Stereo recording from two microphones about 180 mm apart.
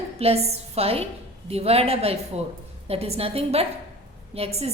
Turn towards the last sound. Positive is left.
turn(degrees=-35)  # may be behind; listen again after turning